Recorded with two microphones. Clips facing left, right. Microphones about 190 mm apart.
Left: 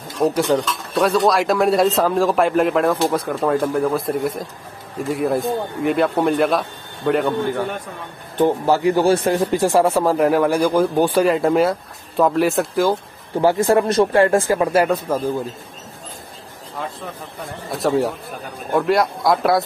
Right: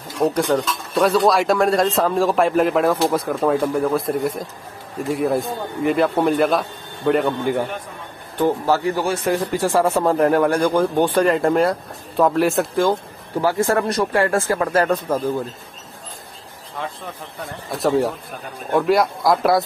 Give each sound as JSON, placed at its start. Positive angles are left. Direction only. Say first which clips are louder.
{"t": 0.2, "sound": "speech", "louder": "left 1 dB", "side_deg": 0}
{"t": 8.5, "sound": "speech", "louder": "left 1 dB", "side_deg": 15}
{"t": 9.0, "sound": "speech", "louder": "left 4 dB", "side_deg": 35}
{"t": 9.6, "sound": "speech", "louder": "left 2 dB", "side_deg": 15}
{"t": 13.4, "sound": "speech", "louder": "left 3 dB", "side_deg": 20}
{"t": 17.6, "sound": "speech", "louder": "even", "side_deg": 0}